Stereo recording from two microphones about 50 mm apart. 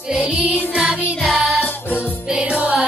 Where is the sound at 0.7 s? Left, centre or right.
Centre.